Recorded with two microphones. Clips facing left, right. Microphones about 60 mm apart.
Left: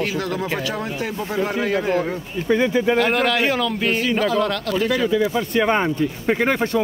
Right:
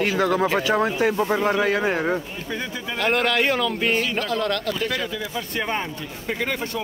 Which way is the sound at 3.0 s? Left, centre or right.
Centre.